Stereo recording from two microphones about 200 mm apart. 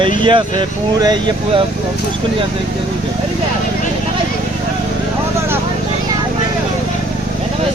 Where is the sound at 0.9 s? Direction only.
20° right (ahead or behind).